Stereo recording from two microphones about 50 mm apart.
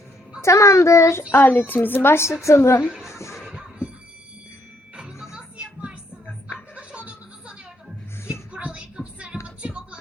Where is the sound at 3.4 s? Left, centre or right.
Centre.